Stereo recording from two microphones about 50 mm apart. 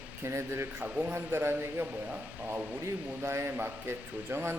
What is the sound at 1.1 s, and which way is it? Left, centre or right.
Speech, right.